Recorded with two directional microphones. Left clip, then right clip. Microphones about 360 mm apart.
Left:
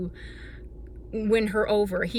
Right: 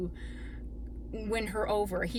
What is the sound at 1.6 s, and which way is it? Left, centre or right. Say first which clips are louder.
Speech: left 7 dB; centre.